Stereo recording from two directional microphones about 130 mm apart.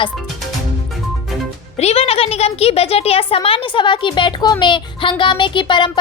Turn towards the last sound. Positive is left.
turn(degrees=35)  # may be behind; listen again after turning